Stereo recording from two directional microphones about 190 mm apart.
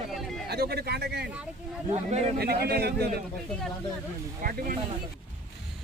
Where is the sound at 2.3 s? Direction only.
55° right (ahead or behind).